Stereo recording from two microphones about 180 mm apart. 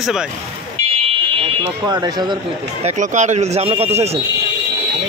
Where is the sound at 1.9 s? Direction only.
20° right (ahead or behind).